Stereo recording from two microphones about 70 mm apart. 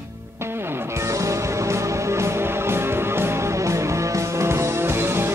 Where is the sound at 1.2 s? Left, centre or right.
Right.